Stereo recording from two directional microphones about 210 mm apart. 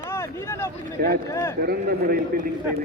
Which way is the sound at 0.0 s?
10° left (ahead or behind).